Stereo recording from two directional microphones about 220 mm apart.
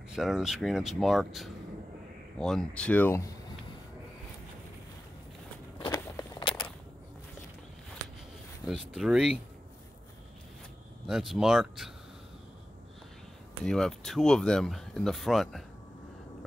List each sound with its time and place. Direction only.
0.1 s speech: centre (ahead or behind)
5.8 s walk: 20° left (ahead or behind)
8.6 s speech: centre (ahead or behind)
11.1 s speech: centre (ahead or behind)
13.7 s speech: centre (ahead or behind)